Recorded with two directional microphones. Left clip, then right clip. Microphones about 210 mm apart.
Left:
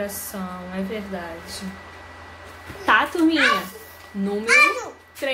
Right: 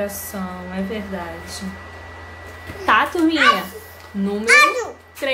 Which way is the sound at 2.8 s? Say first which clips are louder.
Right 2 dB; 5° left (ahead or behind).